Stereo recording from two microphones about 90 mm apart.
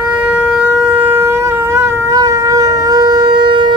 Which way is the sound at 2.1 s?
40° right (ahead or behind).